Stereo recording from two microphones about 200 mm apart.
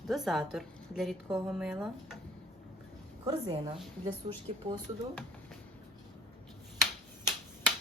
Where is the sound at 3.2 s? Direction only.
20° right (ahead or behind).